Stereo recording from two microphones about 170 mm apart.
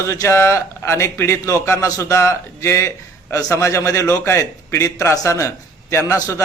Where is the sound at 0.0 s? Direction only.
20° left (ahead or behind).